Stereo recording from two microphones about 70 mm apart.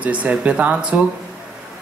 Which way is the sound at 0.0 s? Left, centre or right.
Centre.